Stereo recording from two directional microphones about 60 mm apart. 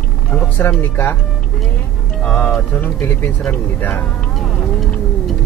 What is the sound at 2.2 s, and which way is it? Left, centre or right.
Speech, left.